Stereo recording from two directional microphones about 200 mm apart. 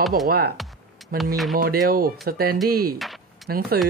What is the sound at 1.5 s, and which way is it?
Speech, 45° right (ahead or behind).